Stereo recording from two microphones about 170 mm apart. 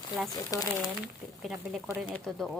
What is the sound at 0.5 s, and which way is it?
Speech, 20° left (ahead or behind).